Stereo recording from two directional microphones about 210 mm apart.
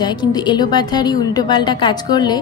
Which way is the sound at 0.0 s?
20° left (ahead or behind).